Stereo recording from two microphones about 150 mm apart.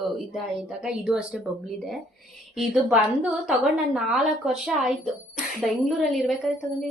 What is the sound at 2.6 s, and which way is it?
A woman's voice, 5° right (ahead or behind).